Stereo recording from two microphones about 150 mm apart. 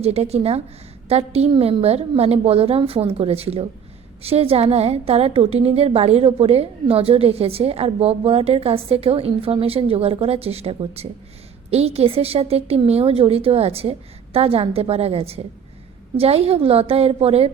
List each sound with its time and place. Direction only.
0.0 s a woman's voice: 45° right (ahead or behind)